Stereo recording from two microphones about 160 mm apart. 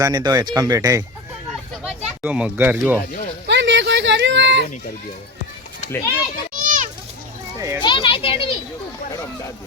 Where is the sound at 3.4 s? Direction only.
90° right.